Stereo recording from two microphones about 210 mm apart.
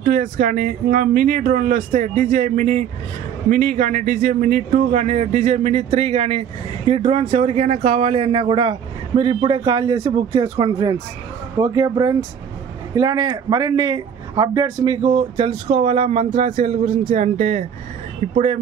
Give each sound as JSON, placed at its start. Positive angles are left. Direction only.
{"t": 0.0, "sound": "a man's voice", "side_deg": -40}